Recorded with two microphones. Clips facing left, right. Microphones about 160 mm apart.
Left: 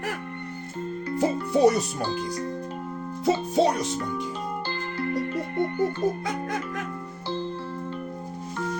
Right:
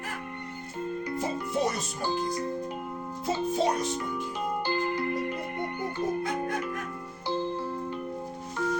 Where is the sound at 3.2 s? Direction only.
80° left.